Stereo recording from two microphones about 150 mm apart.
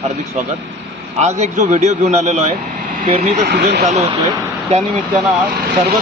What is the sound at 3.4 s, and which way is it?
Speech, 90° right.